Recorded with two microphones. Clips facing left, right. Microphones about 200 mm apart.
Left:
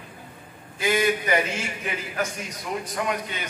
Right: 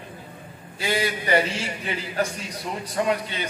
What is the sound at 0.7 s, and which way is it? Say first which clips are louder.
A man's voice: left 3 dB; 35° right (ahead or behind).